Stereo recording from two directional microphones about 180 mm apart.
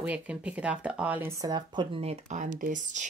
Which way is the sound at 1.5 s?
25° right (ahead or behind).